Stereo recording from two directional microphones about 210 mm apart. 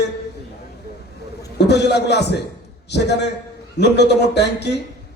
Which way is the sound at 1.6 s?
55° left (ahead or behind).